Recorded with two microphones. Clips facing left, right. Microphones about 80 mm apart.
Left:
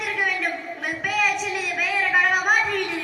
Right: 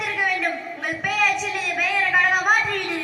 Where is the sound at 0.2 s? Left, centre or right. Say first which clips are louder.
Right 2 dB; centre.